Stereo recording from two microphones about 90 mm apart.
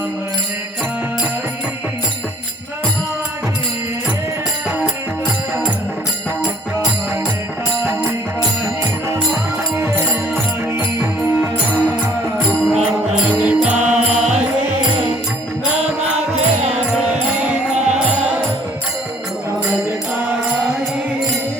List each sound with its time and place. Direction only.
9.7 s music: 25° right (ahead or behind)
12.6 s music: centre (ahead or behind)
13.2 s mantra: 15° right (ahead or behind)
16.7 s music: 10° right (ahead or behind)